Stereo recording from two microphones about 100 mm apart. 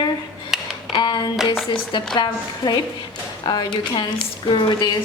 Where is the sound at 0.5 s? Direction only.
5° right (ahead or behind).